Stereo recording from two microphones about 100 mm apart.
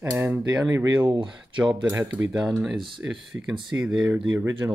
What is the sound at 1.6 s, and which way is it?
Speech, 15° right (ahead or behind).